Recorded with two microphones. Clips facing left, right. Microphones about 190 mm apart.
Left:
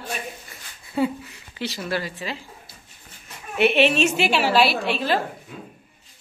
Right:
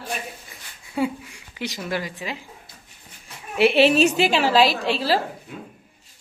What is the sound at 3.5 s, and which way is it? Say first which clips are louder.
A woman's voice: right 2 dB; 35° right (ahead or behind).